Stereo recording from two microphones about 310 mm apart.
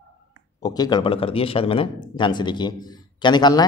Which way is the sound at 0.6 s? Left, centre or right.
Centre.